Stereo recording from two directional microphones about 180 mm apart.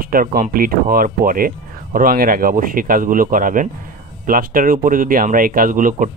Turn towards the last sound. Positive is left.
turn(degrees=-45)  # may be behind; listen again after turning